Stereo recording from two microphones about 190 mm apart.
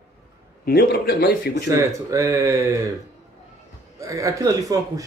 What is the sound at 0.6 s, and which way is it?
Speech, 55° left (ahead or behind).